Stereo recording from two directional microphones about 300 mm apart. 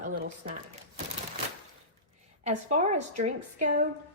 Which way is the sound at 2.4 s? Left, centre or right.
Right.